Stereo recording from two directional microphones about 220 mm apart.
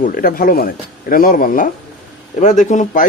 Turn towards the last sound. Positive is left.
turn(degrees=35)  # may be behind; listen again after turning